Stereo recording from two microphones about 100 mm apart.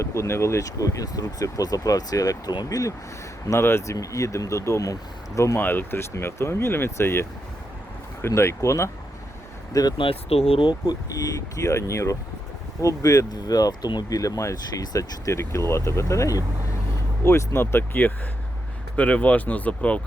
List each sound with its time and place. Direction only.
0.0 s speech: 30° left (ahead or behind)
5.5 s speech: 20° left (ahead or behind)
10.0 s speech: 75° left (ahead or behind)
10.7 s speech: 40° left (ahead or behind); by 20.0 s 15° left (ahead or behind)